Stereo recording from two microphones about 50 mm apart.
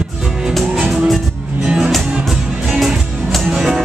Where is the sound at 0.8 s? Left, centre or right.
Right.